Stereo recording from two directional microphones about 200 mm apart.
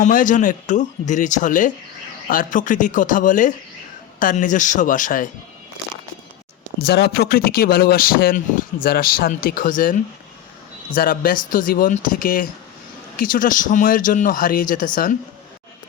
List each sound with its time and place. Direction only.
0.0 s speech: 40° left (ahead or behind)
6.8 s speech: 55° left (ahead or behind)